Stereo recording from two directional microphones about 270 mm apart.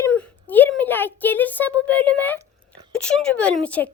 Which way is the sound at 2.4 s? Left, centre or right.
Centre.